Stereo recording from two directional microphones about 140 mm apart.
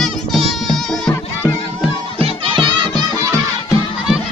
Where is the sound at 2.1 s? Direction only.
40° right (ahead or behind).